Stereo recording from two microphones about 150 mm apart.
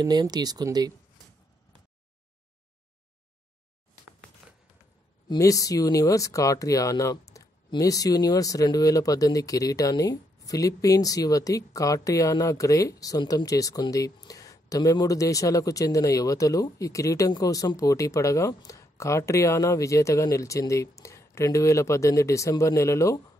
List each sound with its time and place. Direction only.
0.0 s speech: 25° right (ahead or behind)
4.4 s a sound: 5° right (ahead or behind)
5.3 s speech: 20° left (ahead or behind)